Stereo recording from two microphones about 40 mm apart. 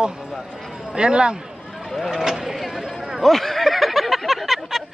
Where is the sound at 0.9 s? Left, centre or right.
Right.